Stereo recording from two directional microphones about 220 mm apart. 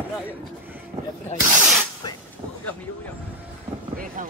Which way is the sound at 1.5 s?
5° right (ahead or behind).